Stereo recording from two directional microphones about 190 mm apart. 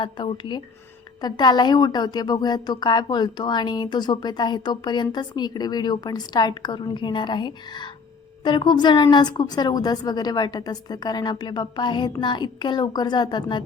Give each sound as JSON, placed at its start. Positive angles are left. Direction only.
{"t": 0.0, "sound": "a woman's voice", "side_deg": 25}